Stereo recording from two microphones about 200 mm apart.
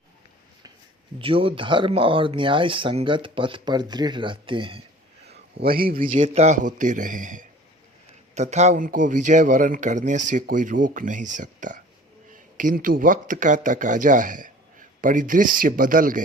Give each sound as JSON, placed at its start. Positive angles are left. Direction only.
{"t": 1.2, "sound": "speech", "side_deg": -25}
{"t": 5.5, "sound": "speech", "side_deg": -50}
{"t": 6.2, "sound": "speech", "side_deg": -35}